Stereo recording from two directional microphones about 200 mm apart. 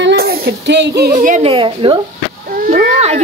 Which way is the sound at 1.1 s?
40° right (ahead or behind).